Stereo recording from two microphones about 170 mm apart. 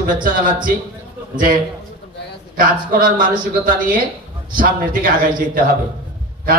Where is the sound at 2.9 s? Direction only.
55° right (ahead or behind).